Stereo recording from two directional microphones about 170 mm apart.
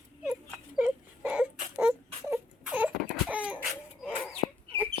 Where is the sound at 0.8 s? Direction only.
10° right (ahead or behind).